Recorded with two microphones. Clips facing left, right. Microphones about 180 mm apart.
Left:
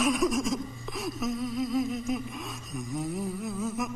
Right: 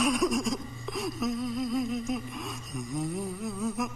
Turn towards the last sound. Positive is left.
turn(degrees=0)  # may be behind; listen again after turning